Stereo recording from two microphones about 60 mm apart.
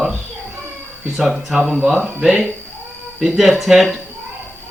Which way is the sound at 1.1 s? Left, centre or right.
Centre.